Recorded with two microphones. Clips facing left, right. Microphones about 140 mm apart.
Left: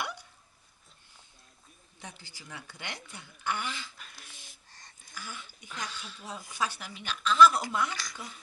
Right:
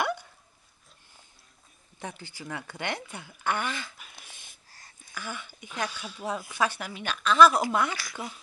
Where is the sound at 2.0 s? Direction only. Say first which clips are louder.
Right 9 dB; 60° right (ahead or behind).